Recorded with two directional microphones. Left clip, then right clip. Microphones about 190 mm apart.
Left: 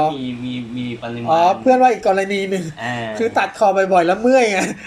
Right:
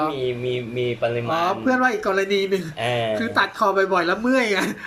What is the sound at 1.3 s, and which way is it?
Speech, 10° left (ahead or behind).